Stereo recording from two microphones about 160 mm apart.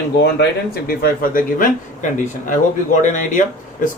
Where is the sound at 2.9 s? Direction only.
50° left (ahead or behind).